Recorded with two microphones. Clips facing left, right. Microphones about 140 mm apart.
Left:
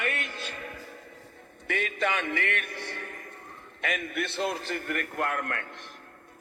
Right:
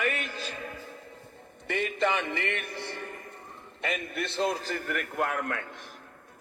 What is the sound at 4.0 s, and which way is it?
A man's voice, 65° left (ahead or behind).